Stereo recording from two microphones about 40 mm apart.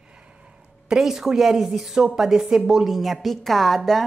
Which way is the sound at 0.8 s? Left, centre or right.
Centre.